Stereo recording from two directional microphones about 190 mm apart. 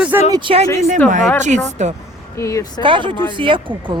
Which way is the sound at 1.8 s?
40° right (ahead or behind).